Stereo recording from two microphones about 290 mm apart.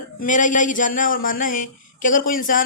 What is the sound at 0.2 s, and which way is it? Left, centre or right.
A woman's voice, left.